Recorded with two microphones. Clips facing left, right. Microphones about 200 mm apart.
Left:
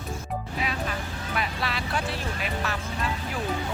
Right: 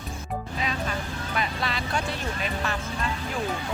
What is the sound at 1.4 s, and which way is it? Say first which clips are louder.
Vehicle: right 1 dB; 5° left (ahead or behind).